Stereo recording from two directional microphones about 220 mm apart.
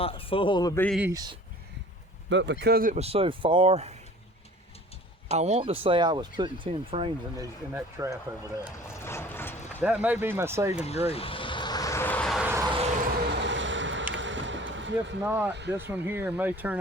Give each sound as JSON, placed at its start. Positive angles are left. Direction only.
{"t": 0.0, "sound": "a man's voice", "side_deg": 25}
{"t": 0.9, "sound": "speech", "side_deg": -10}
{"t": 2.3, "sound": "speech", "side_deg": -55}
{"t": 5.3, "sound": "speech", "side_deg": -30}
{"t": 7.7, "sound": "speech", "side_deg": -10}
{"t": 8.4, "sound": "a sound", "side_deg": 10}
{"t": 9.8, "sound": "speech", "side_deg": -5}
{"t": 10.8, "sound": "vehicle", "side_deg": 30}
{"t": 12.5, "sound": "a sound", "side_deg": -15}
{"t": 13.2, "sound": "vehicle", "side_deg": -55}
{"t": 15.2, "sound": "speech", "side_deg": -10}